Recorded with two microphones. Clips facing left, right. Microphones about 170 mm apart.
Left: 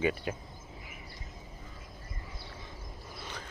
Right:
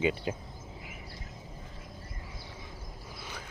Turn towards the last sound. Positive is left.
turn(degrees=-10)  # may be behind; listen again after turning